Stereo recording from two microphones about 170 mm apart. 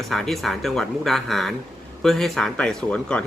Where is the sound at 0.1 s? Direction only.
Centre (ahead or behind).